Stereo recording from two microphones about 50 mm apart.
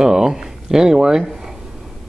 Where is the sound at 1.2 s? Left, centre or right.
Centre.